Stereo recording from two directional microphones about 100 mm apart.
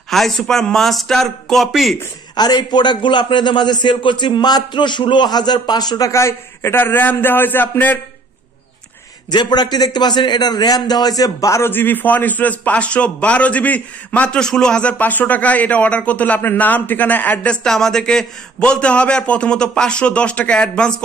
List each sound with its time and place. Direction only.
0.1 s a man's voice: centre (ahead or behind)
2.3 s a man's voice: 45° left (ahead or behind); by 8.0 s 20° left (ahead or behind)
9.3 s a man's voice: 45° left (ahead or behind); by 21.0 s 10° left (ahead or behind)